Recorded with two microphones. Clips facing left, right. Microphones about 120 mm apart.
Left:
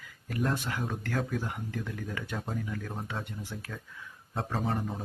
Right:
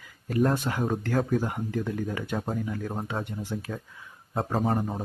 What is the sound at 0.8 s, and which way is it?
Speech, 40° right (ahead or behind).